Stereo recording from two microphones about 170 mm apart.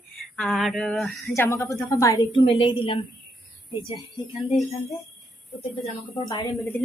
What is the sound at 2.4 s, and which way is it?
Speech, 30° left (ahead or behind).